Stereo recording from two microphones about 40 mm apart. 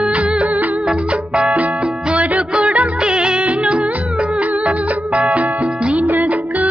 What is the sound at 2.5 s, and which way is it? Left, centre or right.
Music, right.